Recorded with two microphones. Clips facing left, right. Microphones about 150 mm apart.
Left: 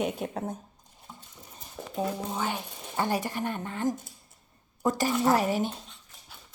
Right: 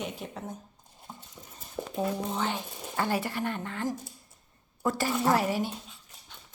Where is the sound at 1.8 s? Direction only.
20° right (ahead or behind).